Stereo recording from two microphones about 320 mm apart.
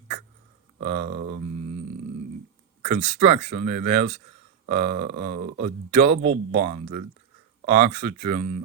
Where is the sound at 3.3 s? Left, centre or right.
Centre.